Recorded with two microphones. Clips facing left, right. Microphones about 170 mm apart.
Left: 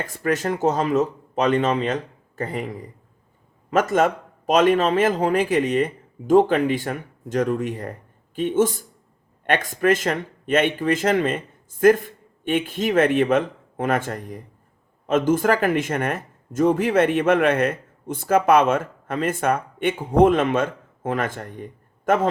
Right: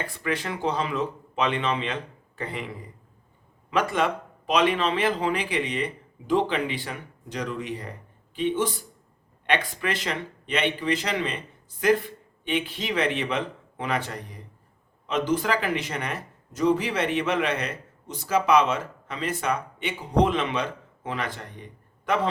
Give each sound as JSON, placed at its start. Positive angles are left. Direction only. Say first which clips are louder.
{"t": 0.0, "sound": "speech", "louder": "left 6 dB", "side_deg": 45}